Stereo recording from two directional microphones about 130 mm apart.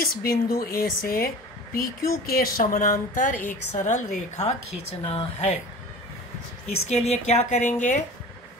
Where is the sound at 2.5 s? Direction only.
90° left; by 5.6 s 55° left (ahead or behind).